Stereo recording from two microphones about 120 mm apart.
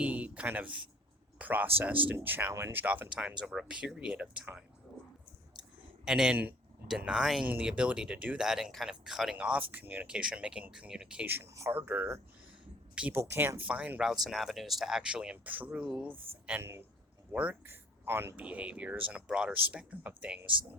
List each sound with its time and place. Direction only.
0.0 s speech: 10° right (ahead or behind)
6.1 s speech: 5° right (ahead or behind)
16.1 s speech: 50° right (ahead or behind)
16.5 s speech: 20° right (ahead or behind)